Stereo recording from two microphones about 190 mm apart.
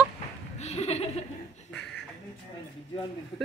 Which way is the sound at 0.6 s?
35° left (ahead or behind).